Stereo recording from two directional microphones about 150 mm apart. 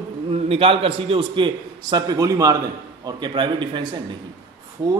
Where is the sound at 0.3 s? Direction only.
40° right (ahead or behind).